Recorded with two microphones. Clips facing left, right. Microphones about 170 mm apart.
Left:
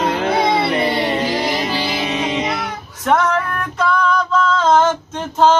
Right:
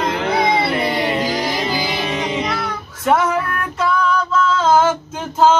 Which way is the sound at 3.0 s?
5° right (ahead or behind).